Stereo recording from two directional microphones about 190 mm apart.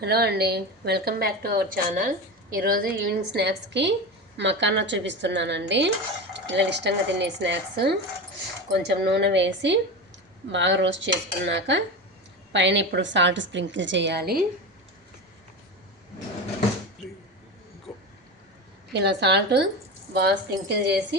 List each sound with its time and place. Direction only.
0.0 s a woman's voice: 60° right (ahead or behind)
17.9 s a sound: centre (ahead or behind)
18.9 s a woman's voice: 65° right (ahead or behind)